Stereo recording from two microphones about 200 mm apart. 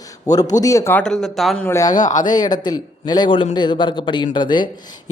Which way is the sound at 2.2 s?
20° left (ahead or behind).